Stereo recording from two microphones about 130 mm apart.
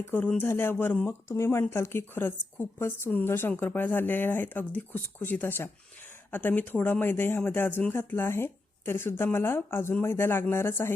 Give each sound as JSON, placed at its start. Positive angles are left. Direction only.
{"t": 0.0, "sound": "speech", "side_deg": 15}